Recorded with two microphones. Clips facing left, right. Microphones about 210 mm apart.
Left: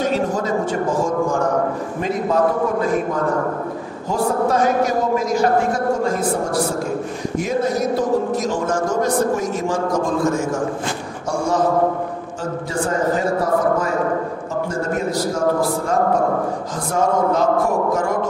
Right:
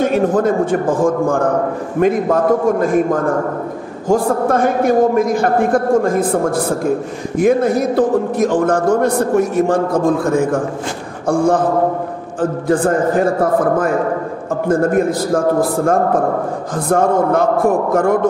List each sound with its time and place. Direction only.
0.0 s a man's voice: 55° right (ahead or behind)